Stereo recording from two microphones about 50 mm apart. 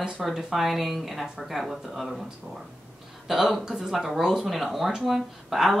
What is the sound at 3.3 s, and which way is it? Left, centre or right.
Speech, centre.